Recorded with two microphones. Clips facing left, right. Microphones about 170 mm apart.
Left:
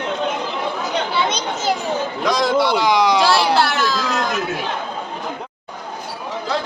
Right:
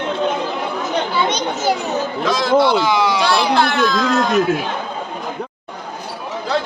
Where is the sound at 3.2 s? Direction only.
5° left (ahead or behind).